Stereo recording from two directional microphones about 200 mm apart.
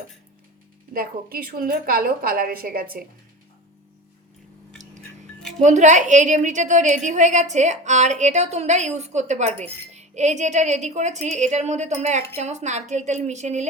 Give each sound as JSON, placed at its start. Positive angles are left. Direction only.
{"t": 0.9, "sound": "a woman's voice", "side_deg": -45}
{"t": 5.4, "sound": "music", "side_deg": 0}
{"t": 5.6, "sound": "a woman's voice", "side_deg": -35}